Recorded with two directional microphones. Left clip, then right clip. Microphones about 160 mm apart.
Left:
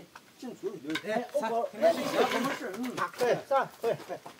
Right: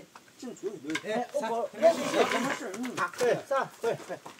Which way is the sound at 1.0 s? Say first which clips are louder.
Left 1 dB; 10° left (ahead or behind).